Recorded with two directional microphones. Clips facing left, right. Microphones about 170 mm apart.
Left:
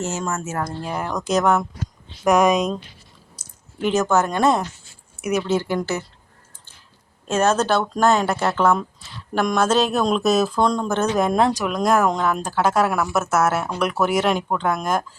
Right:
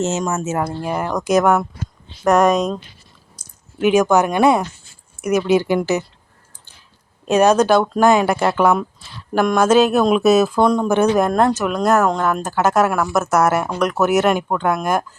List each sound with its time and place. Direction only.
0.0 s speech: 20° right (ahead or behind)
0.9 s speech: 5° right (ahead or behind)
3.8 s speech: 10° right (ahead or behind)
7.3 s speech: 15° right (ahead or behind)
11.2 s speech: centre (ahead or behind)
13.5 s speech: 10° right (ahead or behind)